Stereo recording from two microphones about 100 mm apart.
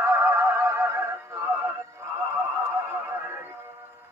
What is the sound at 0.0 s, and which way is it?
Music, 30° right (ahead or behind).